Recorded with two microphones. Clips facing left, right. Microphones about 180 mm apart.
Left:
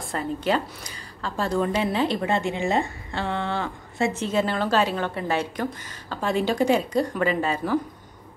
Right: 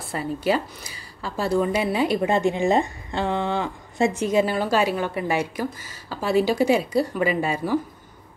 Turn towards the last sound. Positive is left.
turn(degrees=-10)  # may be behind; listen again after turning